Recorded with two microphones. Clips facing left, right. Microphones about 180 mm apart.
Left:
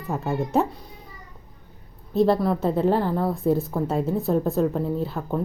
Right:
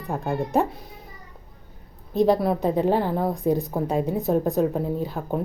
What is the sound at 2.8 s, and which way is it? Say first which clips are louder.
Speech: left 2 dB; 5° right (ahead or behind).